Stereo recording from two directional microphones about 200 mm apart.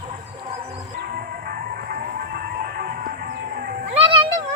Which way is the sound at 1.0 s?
50° right (ahead or behind).